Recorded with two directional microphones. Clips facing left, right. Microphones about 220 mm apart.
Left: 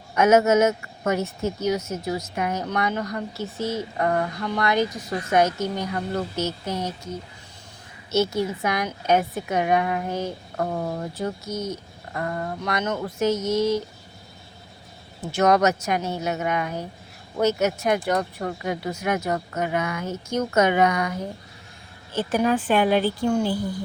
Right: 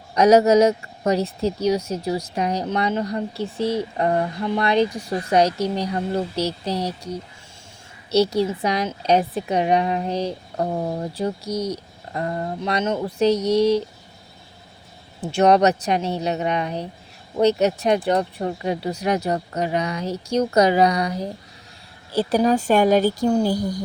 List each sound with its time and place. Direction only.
0.1 s speech: 35° right (ahead or behind)
3.6 s speech: 65° right (ahead or behind)
3.9 s speech: 25° right (ahead or behind)
13.3 s speech: 65° right (ahead or behind)
15.4 s speech: 30° right (ahead or behind)